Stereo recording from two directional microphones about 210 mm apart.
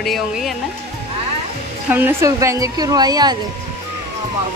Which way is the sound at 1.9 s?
10° right (ahead or behind).